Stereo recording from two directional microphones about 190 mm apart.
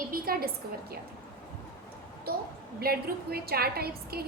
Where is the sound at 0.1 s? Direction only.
50° right (ahead or behind).